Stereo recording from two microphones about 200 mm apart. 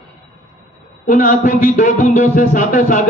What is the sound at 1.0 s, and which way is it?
A man's voice, 40° left (ahead or behind).